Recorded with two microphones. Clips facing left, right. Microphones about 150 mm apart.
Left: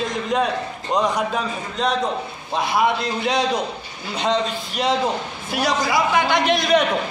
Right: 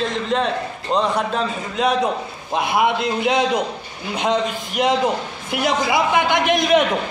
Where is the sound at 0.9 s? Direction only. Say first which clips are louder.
Right 1 dB; centre (ahead or behind).